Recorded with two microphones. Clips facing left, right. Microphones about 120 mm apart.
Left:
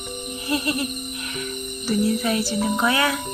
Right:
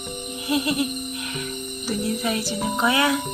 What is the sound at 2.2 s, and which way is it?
Music, 10° right (ahead or behind).